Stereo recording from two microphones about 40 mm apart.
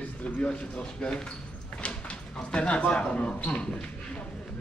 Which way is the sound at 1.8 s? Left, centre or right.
Left.